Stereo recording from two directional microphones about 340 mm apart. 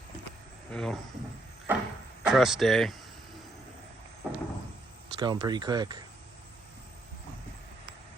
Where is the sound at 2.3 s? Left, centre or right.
Centre.